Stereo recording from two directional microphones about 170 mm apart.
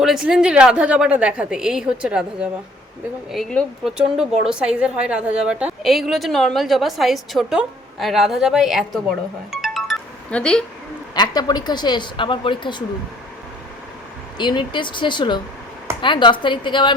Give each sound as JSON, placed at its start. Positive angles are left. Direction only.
{"t": 0.0, "sound": "speech", "side_deg": -5}
{"t": 9.5, "sound": "music", "side_deg": 0}
{"t": 11.1, "sound": "speech", "side_deg": 25}
{"t": 14.3, "sound": "speech", "side_deg": 25}